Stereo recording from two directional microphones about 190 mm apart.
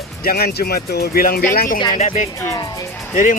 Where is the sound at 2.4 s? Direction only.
15° left (ahead or behind).